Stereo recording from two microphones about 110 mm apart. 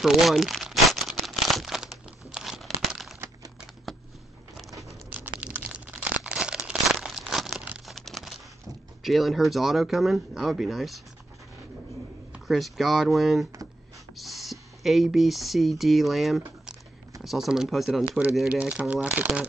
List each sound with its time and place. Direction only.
0.0 s crumpling: centre (ahead or behind)
3.9 s a sound: centre (ahead or behind)
5.4 s crunch: 10° right (ahead or behind)
7.8 s crumpling: centre (ahead or behind)
9.0 s speech: centre (ahead or behind)
12.3 s speech: centre (ahead or behind)